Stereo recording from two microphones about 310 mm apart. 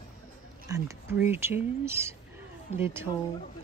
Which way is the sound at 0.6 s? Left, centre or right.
Centre.